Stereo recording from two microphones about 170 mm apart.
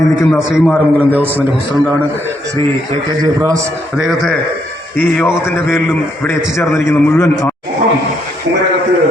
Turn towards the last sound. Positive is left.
turn(degrees=15)  # may be behind; listen again after turning